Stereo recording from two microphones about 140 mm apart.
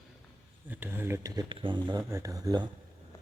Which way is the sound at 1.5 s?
35° right (ahead or behind).